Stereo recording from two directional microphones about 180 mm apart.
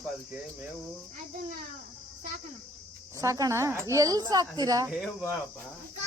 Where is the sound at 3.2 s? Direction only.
20° right (ahead or behind).